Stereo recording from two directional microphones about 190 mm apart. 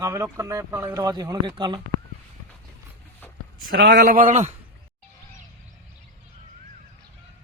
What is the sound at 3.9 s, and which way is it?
Speech, 50° right (ahead or behind).